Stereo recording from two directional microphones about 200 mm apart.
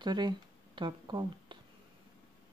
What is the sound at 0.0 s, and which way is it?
Speech, 20° right (ahead or behind).